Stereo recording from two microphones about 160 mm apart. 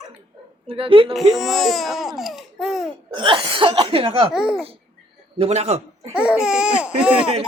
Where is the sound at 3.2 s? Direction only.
30° right (ahead or behind).